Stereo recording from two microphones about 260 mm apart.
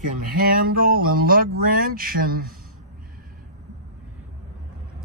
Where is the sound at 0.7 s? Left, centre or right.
Right.